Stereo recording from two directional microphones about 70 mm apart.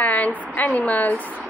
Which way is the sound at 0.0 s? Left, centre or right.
Left.